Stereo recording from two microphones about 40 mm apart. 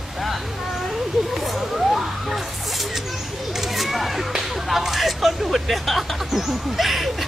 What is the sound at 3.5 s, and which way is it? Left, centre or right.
Speech, centre.